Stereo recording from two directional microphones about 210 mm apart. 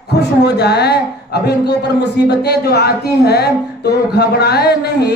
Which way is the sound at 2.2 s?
50° left (ahead or behind).